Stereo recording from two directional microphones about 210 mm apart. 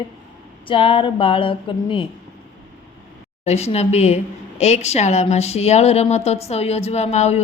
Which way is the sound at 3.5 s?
30° left (ahead or behind).